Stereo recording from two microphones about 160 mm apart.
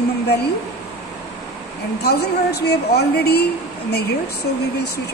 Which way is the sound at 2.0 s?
90° left.